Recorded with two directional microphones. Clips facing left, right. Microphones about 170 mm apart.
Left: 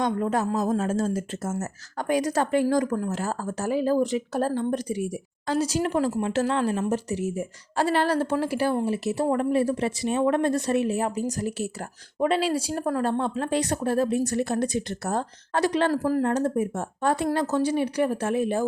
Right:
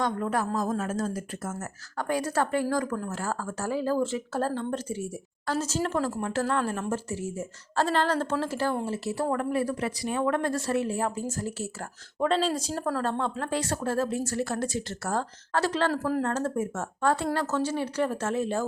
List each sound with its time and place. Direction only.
0.0 s a woman's voice: 20° left (ahead or behind)